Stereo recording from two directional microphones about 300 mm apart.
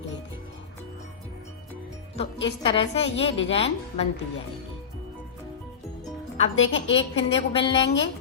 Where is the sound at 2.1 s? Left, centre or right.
Centre.